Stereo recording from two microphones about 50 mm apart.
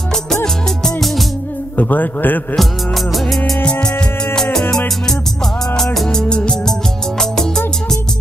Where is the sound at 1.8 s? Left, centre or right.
Left.